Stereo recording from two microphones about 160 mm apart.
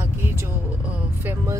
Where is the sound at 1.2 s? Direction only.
20° right (ahead or behind).